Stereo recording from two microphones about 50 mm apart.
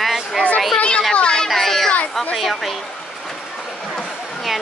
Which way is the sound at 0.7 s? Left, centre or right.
Left.